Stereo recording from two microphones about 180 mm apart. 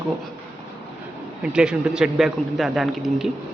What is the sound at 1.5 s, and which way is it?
Speech, 5° right (ahead or behind).